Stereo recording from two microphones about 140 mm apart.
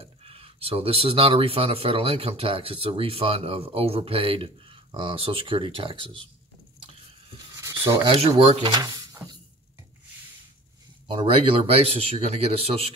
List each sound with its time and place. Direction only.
0.0 s speech: 45° right (ahead or behind)
7.5 s rub: 20° right (ahead or behind)
8.0 s speech: 45° right (ahead or behind)
8.7 s a sound: 25° right (ahead or behind)
11.1 s speech: 40° right (ahead or behind)